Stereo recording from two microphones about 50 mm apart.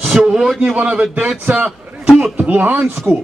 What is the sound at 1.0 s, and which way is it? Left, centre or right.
Speech, right.